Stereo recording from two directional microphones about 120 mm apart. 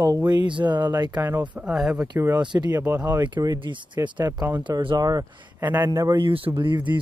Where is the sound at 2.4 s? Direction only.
35° right (ahead or behind).